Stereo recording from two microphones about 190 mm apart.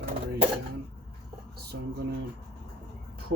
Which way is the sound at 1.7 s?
65° right (ahead or behind).